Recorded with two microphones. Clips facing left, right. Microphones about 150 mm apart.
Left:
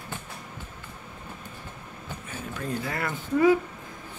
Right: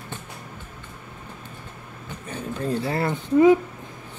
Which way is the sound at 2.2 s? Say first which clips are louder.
Right 7 dB; 30° right (ahead or behind).